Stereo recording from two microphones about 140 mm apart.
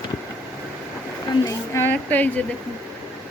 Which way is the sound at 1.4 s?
20° left (ahead or behind).